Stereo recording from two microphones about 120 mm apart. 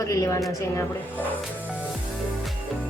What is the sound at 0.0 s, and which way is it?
Speech, 25° left (ahead or behind).